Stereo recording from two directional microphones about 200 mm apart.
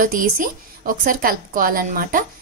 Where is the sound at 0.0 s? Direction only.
45° right (ahead or behind).